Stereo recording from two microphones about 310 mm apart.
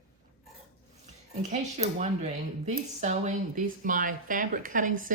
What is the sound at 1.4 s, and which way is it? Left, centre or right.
Speech, right.